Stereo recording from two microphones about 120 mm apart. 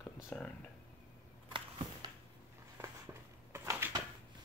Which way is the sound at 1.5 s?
40° right (ahead or behind).